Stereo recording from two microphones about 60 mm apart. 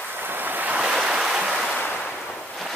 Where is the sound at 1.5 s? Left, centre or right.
Centre.